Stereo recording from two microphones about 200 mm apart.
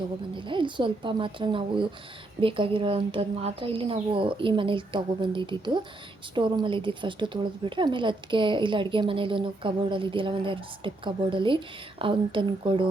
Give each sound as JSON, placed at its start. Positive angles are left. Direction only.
{"t": 0.3, "sound": "a woman's voice", "side_deg": -25}